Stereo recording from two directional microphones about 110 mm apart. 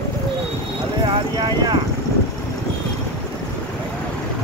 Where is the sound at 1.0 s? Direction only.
40° right (ahead or behind).